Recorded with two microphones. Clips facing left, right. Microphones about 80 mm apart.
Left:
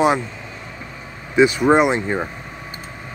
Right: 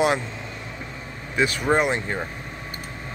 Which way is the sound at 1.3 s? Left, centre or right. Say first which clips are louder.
Left 7 dB; centre.